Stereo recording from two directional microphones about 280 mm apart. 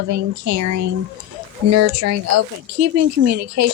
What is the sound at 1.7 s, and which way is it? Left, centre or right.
Speech, right.